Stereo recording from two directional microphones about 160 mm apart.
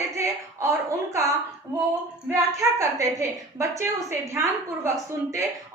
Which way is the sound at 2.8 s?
20° right (ahead or behind).